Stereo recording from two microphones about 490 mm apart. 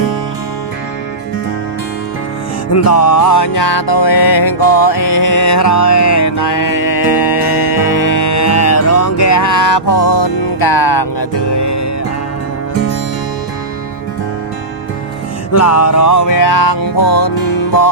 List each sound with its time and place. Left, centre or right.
3.0 s music: left
4.9 s music: left
15.5 s music: left